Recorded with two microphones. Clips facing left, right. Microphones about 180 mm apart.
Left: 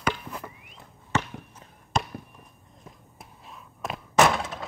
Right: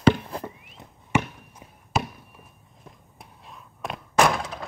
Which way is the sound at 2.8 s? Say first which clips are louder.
Even; centre (ahead or behind).